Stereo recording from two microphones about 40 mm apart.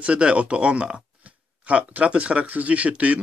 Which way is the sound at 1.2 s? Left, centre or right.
Right.